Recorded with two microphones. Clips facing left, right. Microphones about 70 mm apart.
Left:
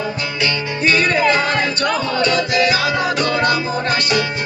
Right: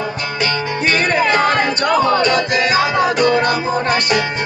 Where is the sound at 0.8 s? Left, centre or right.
Right.